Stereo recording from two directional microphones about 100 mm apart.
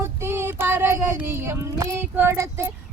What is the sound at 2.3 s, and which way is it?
Speech, 30° right (ahead or behind).